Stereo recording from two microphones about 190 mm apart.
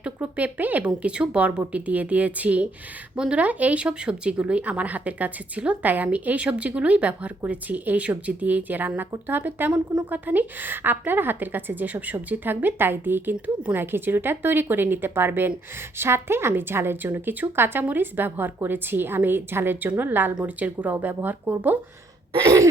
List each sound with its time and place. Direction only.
0.0 s speech: 5° right (ahead or behind)